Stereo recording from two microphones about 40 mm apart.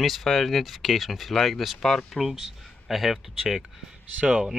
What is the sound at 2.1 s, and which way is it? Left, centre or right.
Speech, centre.